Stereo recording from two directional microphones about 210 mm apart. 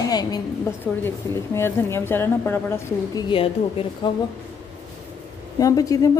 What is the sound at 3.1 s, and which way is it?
A woman's voice, 20° left (ahead or behind).